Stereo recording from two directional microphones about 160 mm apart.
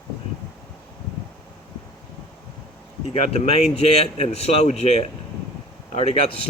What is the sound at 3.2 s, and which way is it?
Speech, 40° left (ahead or behind).